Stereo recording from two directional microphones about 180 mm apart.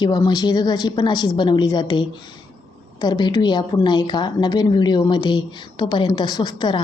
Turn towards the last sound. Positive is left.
turn(degrees=25)  # may be behind; listen again after turning